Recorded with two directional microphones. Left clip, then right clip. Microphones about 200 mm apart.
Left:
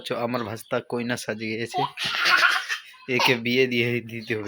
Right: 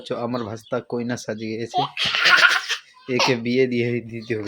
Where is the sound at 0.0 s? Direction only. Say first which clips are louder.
Right 1 dB; centre (ahead or behind).